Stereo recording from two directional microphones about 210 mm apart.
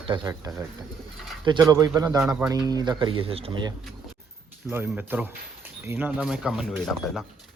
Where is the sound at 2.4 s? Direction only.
20° right (ahead or behind).